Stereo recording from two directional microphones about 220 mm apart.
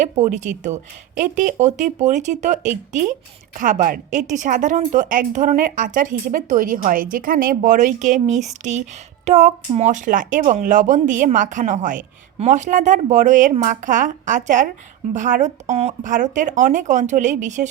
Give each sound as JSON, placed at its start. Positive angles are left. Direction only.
{"t": 0.0, "sound": "speech", "side_deg": -35}